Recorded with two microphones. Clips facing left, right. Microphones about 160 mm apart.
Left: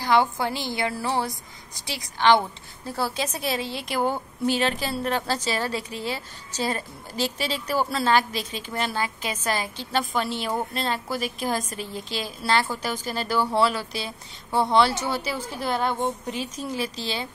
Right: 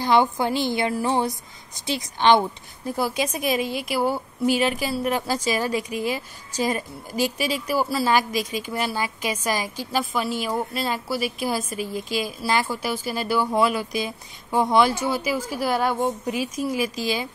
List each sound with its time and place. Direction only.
0.0 s a woman's voice: 20° right (ahead or behind)